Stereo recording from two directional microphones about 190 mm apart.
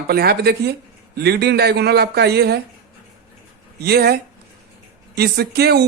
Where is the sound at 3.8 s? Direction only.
55° right (ahead or behind).